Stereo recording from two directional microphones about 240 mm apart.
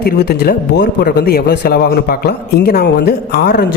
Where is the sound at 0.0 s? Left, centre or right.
Left.